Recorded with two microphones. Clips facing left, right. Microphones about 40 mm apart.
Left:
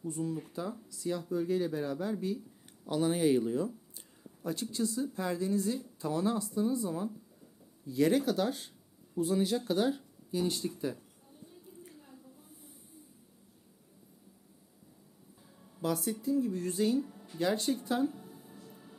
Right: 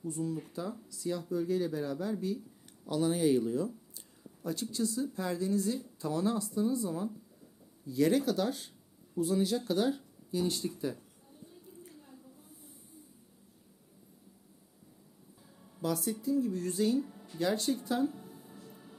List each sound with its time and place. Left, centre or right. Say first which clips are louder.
0.0 s speech: even; centre
15.8 s speech: even; left
18.3 s music: even; centre